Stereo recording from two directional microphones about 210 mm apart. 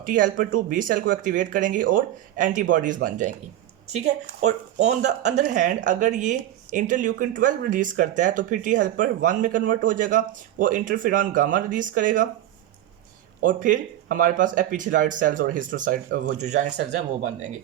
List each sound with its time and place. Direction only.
0.0 s speech: 40° right (ahead or behind)
13.4 s speech: 40° right (ahead or behind)